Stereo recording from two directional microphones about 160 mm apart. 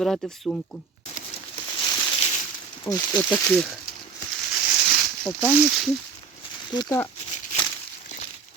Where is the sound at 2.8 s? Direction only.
20° left (ahead or behind).